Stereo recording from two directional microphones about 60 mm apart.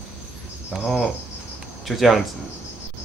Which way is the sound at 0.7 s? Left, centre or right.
Centre.